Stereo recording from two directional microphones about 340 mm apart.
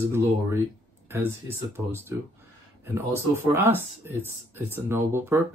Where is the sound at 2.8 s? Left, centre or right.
Centre.